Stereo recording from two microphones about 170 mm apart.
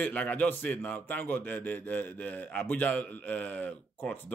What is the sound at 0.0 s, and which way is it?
A man's voice, 10° left (ahead or behind).